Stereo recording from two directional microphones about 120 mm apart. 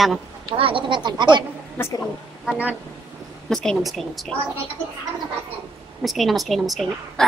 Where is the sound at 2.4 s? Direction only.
10° right (ahead or behind).